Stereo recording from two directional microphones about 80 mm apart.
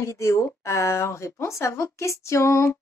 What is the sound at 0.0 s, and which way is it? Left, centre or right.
A woman's voice, left.